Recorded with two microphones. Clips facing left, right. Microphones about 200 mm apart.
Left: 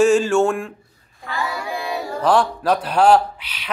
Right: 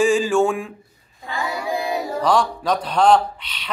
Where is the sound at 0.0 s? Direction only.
Centre (ahead or behind).